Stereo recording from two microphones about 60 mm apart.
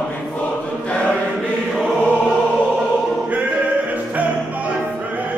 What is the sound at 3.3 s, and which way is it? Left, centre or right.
Music, centre.